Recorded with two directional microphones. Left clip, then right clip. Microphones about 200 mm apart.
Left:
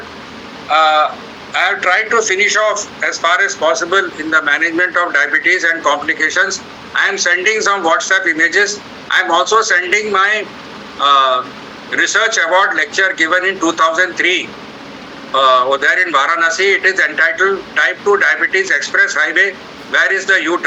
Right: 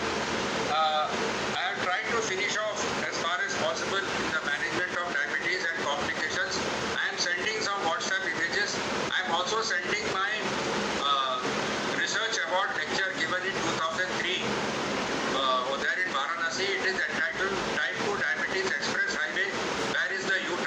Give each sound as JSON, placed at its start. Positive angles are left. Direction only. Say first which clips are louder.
{"t": 0.7, "sound": "speech", "louder": "left 17 dB", "side_deg": 45}